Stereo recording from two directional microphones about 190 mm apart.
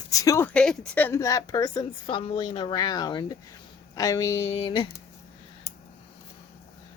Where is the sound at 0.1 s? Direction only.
15° left (ahead or behind).